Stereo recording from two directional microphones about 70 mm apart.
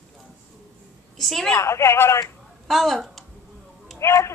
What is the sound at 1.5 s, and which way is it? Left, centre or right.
Speech, left.